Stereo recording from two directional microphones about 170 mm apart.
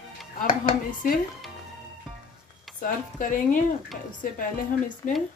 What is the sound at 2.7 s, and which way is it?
Speech, 50° left (ahead or behind).